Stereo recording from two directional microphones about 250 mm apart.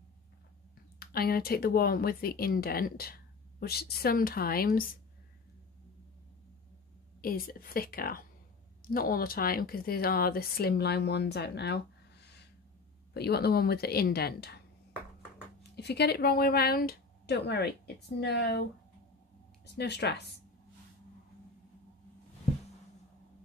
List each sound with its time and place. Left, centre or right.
0.9 s speech: left
7.2 s speech: left
15.7 s speech: left